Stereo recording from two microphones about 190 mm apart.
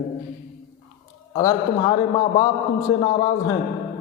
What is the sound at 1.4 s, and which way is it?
Speech, 20° left (ahead or behind).